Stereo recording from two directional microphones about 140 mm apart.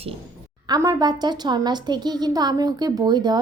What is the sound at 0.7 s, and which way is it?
A woman's voice, 25° right (ahead or behind).